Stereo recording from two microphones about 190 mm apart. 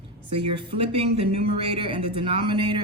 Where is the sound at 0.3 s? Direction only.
30° right (ahead or behind).